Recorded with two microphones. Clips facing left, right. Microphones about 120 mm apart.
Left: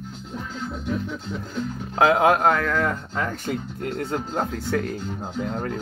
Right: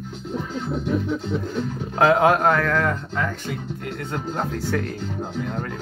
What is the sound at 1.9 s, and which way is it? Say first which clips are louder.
Speech: right 1 dB; 10° left (ahead or behind).